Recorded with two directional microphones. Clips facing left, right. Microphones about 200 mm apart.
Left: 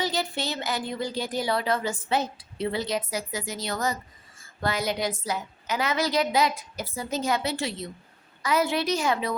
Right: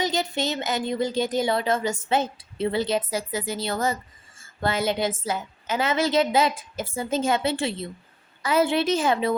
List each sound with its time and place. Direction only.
0.0 s speech: 20° right (ahead or behind)